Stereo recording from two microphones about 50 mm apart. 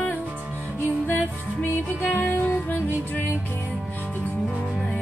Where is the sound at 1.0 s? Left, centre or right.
Left.